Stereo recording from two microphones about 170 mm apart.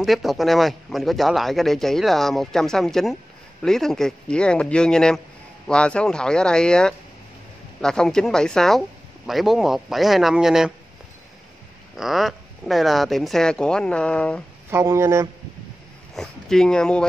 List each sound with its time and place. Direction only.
0.0 s speech: centre (ahead or behind)
12.0 s speech: centre (ahead or behind)
14.7 s speech: 15° right (ahead or behind)
16.2 s speech: 5° left (ahead or behind)